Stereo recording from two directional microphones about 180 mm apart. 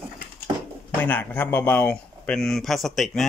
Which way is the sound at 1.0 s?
10° left (ahead or behind).